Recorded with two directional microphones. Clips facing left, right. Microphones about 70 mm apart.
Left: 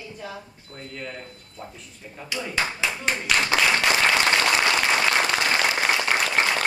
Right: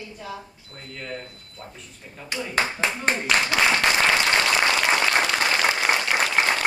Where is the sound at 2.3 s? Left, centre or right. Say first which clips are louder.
Right 2 dB; right.